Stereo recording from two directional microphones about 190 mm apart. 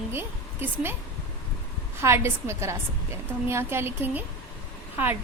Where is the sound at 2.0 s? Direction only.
15° right (ahead or behind).